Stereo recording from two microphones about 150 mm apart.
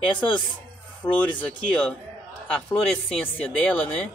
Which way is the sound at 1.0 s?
15° left (ahead or behind).